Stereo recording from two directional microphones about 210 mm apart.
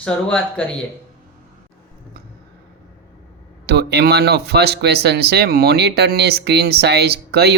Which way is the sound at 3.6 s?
50° right (ahead or behind).